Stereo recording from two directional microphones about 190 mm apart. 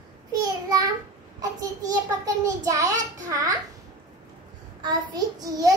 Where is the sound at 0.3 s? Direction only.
20° right (ahead or behind).